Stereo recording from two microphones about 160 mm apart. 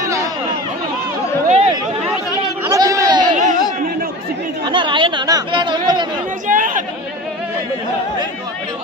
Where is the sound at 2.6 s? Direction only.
20° right (ahead or behind).